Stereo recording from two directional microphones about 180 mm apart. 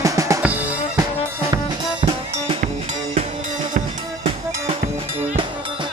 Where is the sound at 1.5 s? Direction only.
30° right (ahead or behind).